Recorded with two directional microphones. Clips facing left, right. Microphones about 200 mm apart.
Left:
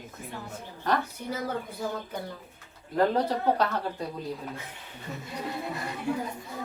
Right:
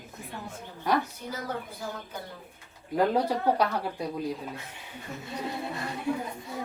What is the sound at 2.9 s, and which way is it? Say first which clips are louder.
Speech: even; 10° right (ahead or behind).